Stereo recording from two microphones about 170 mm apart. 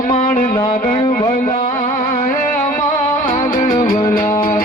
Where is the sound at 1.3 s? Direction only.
50° left (ahead or behind).